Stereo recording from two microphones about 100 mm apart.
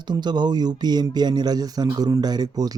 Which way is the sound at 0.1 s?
45° right (ahead or behind).